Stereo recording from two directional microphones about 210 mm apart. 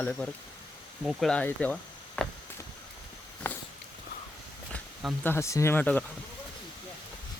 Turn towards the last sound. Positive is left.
turn(degrees=5)  # may be behind; listen again after turning